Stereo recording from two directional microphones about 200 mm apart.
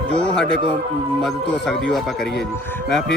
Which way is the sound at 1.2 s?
Centre (ahead or behind).